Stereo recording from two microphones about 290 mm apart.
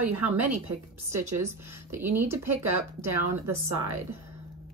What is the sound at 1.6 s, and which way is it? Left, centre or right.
Speech, centre.